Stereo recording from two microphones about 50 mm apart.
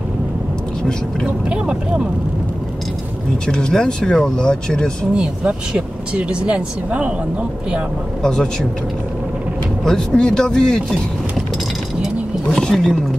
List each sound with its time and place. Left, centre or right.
1.2 s speech: centre
3.4 s speech: centre
5.1 s speech: centre
8.2 s speech: centre
9.8 s speech: centre
12.5 s speech: centre